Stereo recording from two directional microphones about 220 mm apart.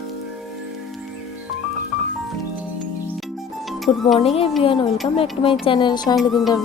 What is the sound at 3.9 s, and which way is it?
Speech, 25° left (ahead or behind).